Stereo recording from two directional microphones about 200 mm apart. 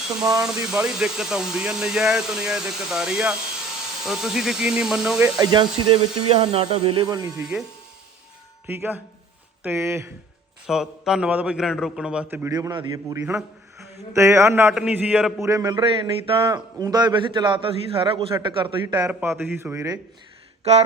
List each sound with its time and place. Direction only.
0.4 s speech: 5° right (ahead or behind)
5.4 s speech: 20° right (ahead or behind)
8.6 s a man's voice: 10° right (ahead or behind)
10.7 s a man's voice: centre (ahead or behind)
20.7 s a sound: 30° right (ahead or behind)